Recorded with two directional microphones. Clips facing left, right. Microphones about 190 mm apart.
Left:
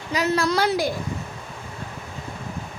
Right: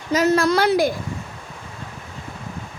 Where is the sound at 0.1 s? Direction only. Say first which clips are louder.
Right 5 dB; 45° right (ahead or behind).